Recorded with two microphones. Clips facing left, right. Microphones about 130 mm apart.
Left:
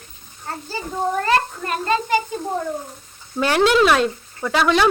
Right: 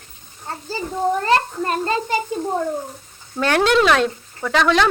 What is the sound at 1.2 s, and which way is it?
Speech, 30° right (ahead or behind).